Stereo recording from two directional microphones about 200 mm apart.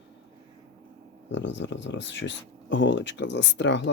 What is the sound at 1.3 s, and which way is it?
Speech, 65° left (ahead or behind).